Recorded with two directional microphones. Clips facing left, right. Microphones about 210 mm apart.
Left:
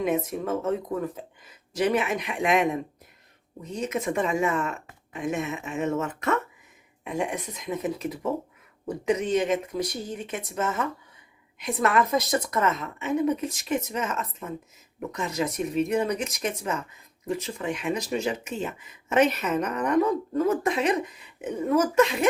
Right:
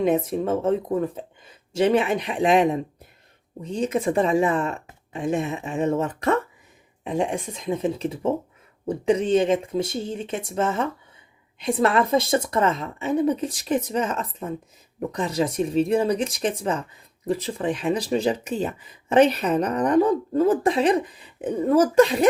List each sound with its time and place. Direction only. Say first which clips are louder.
0.0 s speech: right 5 dB; 30° right (ahead or behind)